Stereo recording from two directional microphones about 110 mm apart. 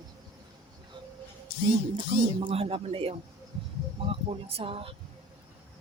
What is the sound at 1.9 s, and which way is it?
Speech, 55° right (ahead or behind).